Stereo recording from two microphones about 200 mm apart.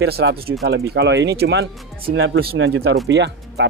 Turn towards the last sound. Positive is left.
turn(degrees=-60)  # may be behind; listen again after turning